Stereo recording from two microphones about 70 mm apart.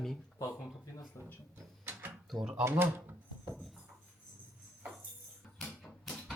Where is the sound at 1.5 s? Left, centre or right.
Right.